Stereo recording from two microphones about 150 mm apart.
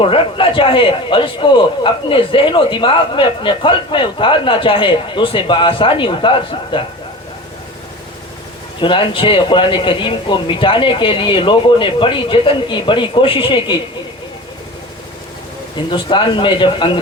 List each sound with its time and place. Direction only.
0.0 s a man's voice: 35° left (ahead or behind)
8.8 s a man's voice: 35° left (ahead or behind)
15.9 s a man's voice: 35° left (ahead or behind)